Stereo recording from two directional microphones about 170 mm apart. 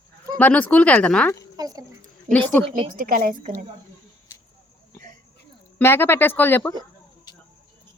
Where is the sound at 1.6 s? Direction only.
20° right (ahead or behind).